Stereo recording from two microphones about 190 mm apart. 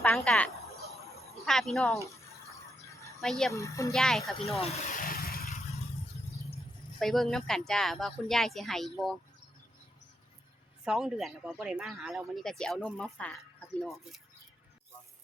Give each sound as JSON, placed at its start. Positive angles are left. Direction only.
{"t": 0.0, "sound": "speech", "side_deg": 5}
{"t": 3.2, "sound": "speech", "side_deg": 0}
{"t": 3.5, "sound": "speech", "side_deg": 15}
{"t": 3.9, "sound": "speech", "side_deg": 0}
{"t": 4.6, "sound": "speech", "side_deg": 35}
{"t": 4.9, "sound": "vehicle", "side_deg": 50}
{"t": 7.0, "sound": "speech", "side_deg": 0}
{"t": 10.8, "sound": "speech", "side_deg": 0}